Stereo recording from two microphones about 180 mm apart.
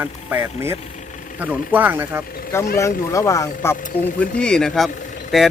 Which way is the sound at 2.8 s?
15° left (ahead or behind).